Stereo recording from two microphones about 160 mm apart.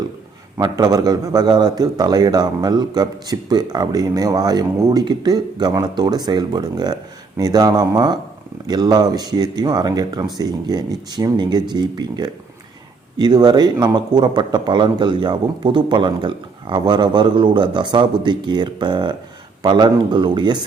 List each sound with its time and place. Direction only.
0.6 s a man's voice: 25° right (ahead or behind)